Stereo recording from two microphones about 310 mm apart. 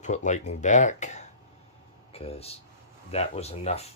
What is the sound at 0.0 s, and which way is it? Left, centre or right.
Speech, left.